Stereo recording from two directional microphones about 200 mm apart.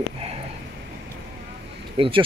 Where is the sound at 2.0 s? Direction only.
25° right (ahead or behind).